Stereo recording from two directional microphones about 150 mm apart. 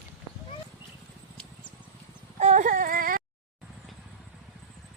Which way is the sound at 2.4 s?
50° right (ahead or behind).